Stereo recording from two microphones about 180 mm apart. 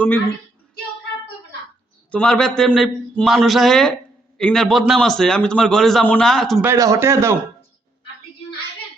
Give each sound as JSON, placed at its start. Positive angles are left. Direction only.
{"t": 2.0, "sound": "a man's voice", "side_deg": 5}
{"t": 6.6, "sound": "speech", "side_deg": -15}